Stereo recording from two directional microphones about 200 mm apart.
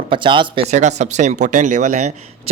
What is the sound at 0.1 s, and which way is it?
Speech, 25° right (ahead or behind).